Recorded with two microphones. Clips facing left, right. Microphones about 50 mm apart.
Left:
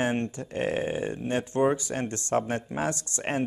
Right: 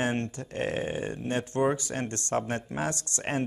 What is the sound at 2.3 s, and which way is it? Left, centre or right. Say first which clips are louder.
Speech: left 3 dB; centre.